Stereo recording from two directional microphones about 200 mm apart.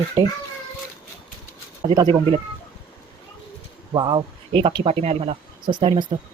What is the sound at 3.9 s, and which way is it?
Speech, 20° right (ahead or behind).